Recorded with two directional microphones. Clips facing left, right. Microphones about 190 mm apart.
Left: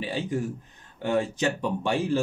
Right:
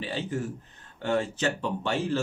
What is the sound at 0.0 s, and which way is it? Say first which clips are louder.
Speech: left 3 dB; 10° left (ahead or behind).